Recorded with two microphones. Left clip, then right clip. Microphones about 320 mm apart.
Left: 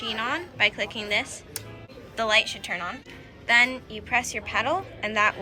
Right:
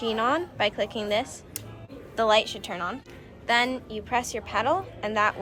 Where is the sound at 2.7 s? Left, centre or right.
Centre.